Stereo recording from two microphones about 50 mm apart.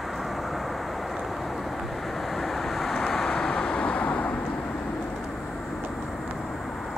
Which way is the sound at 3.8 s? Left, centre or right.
Left.